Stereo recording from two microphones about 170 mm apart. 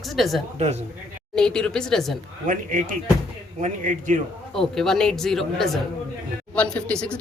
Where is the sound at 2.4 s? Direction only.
50° right (ahead or behind).